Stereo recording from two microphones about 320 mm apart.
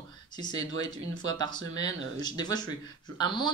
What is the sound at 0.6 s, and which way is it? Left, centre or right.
Speech, right.